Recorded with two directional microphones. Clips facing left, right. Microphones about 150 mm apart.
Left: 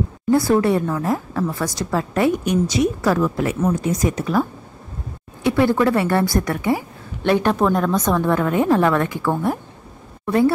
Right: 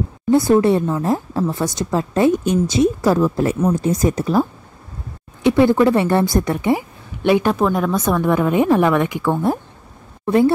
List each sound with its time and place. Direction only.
0.3 s a woman's voice: 20° right (ahead or behind)
7.2 s a woman's voice: 5° right (ahead or behind); by 10.5 s 25° right (ahead or behind)